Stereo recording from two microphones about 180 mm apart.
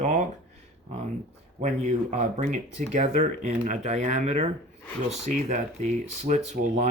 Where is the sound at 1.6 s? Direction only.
40° right (ahead or behind).